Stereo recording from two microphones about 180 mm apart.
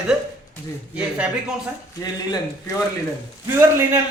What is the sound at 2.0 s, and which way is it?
Speech, 20° left (ahead or behind).